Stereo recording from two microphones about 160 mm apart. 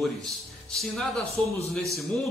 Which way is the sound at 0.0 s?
Centre (ahead or behind).